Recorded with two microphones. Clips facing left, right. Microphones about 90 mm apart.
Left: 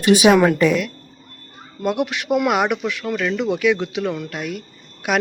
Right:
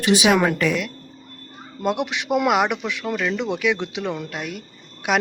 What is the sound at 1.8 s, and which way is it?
Speech, 20° right (ahead or behind).